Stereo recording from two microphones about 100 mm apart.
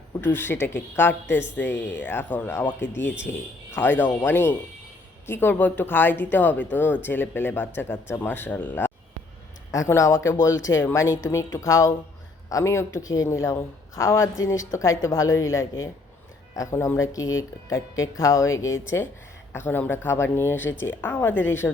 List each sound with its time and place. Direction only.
0.2 s speech: 20° left (ahead or behind)
9.7 s speech: 30° left (ahead or behind)
19.5 s speech: 20° left (ahead or behind)